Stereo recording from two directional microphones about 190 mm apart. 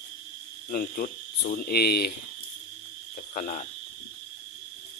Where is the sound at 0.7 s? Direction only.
50° left (ahead or behind).